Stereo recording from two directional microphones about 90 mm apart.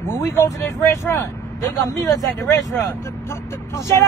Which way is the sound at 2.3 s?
25° left (ahead or behind).